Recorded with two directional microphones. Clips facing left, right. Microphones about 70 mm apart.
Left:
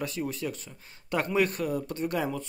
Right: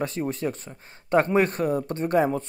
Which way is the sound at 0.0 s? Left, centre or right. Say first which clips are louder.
Right 5 dB; right.